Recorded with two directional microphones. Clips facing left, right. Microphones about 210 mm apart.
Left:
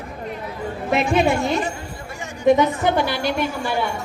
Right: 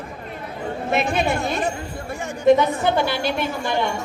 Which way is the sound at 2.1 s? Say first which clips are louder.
Right 7 dB; 55° right (ahead or behind).